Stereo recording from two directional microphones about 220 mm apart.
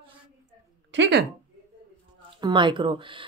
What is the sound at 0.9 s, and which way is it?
Speech, 55° right (ahead or behind).